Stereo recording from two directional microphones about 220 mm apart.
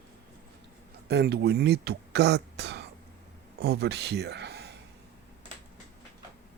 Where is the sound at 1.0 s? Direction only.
50° right (ahead or behind).